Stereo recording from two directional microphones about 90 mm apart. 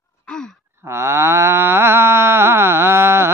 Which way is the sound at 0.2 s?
10° left (ahead or behind).